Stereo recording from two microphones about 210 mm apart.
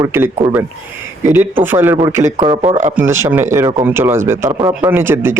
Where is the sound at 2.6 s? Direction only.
35° right (ahead or behind).